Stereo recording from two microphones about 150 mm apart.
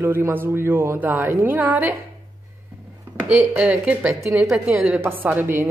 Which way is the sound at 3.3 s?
10° right (ahead or behind).